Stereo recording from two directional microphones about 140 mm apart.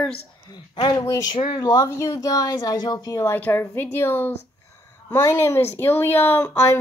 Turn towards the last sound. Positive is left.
turn(degrees=15)  # may be behind; listen again after turning